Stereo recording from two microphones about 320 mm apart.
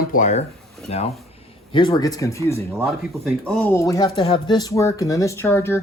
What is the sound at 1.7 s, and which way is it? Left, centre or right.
Speech, centre.